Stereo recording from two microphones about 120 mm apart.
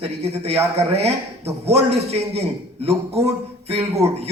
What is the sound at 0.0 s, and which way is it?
Speech, 60° right (ahead or behind).